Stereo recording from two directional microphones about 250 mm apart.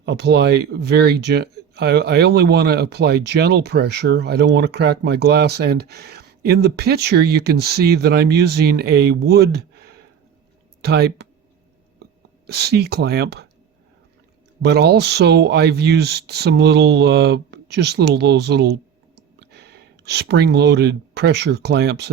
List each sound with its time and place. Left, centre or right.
0.0 s speech: right
12.5 s speech: right
14.6 s speech: right